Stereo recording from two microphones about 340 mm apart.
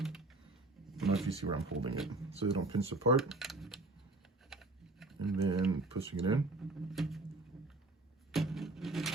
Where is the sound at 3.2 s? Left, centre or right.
Centre.